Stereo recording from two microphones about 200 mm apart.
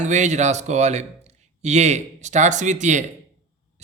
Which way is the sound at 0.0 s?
35° right (ahead or behind).